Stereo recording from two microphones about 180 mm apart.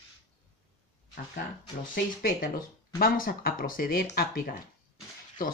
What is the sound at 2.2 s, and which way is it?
A woman's voice, 50° left (ahead or behind).